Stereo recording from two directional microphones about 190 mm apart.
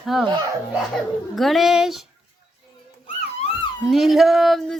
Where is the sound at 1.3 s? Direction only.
Centre (ahead or behind).